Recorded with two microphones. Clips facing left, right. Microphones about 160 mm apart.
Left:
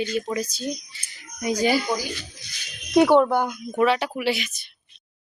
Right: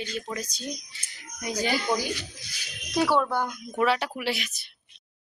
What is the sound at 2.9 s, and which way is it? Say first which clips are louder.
Speech: left 8 dB; 20° left (ahead or behind).